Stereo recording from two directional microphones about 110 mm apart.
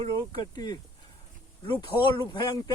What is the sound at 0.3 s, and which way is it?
Speech, 35° left (ahead or behind).